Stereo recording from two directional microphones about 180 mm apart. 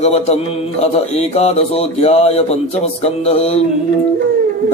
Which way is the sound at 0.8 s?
35° left (ahead or behind).